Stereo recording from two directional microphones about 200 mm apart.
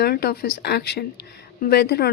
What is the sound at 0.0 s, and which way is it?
Speech, 50° left (ahead or behind).